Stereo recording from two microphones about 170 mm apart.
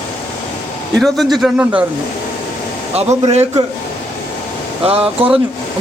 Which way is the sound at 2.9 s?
40° right (ahead or behind).